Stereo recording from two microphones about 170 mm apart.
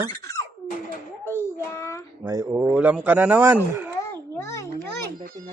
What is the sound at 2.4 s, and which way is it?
Speech, 10° right (ahead or behind).